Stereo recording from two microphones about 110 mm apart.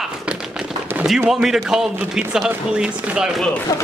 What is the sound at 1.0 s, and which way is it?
A man's voice, 5° right (ahead or behind).